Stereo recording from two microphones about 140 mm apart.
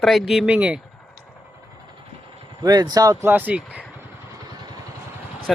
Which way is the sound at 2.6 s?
30° right (ahead or behind).